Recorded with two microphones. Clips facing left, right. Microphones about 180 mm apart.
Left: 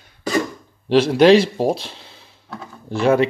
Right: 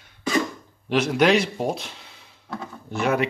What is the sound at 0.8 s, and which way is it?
Speech, 30° left (ahead or behind).